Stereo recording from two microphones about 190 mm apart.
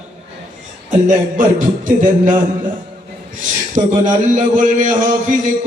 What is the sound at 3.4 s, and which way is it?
A man's voice, 40° right (ahead or behind).